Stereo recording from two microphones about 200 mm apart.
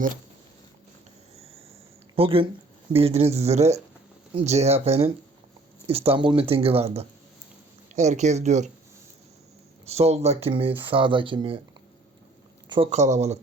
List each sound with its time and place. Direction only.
2.1 s speech: 25° right (ahead or behind)
9.8 s speech: 30° right (ahead or behind)
12.6 s speech: 25° right (ahead or behind)